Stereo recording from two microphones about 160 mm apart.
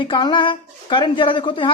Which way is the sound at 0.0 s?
30° left (ahead or behind).